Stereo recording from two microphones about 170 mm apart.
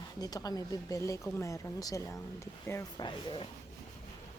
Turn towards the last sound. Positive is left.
turn(degrees=25)  # may be behind; listen again after turning